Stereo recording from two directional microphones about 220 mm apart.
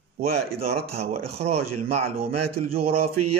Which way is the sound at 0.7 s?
30° right (ahead or behind).